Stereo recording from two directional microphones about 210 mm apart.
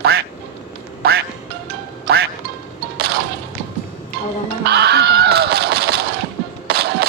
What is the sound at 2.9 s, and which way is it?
Music, 50° right (ahead or behind).